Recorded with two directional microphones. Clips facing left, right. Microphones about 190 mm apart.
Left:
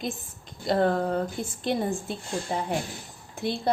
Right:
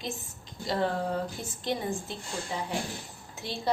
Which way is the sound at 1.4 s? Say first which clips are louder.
Left 5 dB; 55° left (ahead or behind).